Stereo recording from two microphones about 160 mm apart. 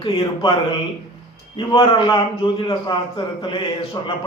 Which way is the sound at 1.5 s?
35° left (ahead or behind).